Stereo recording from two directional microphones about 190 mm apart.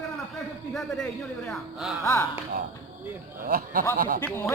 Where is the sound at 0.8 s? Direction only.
5° left (ahead or behind).